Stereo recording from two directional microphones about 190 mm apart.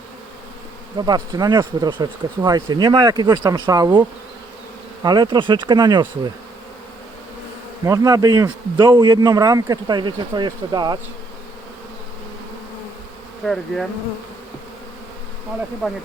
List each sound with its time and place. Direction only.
0.9 s speech: 20° right (ahead or behind)
5.0 s speech: 20° right (ahead or behind)
7.9 s speech: 20° right (ahead or behind)
13.4 s bee: centre (ahead or behind)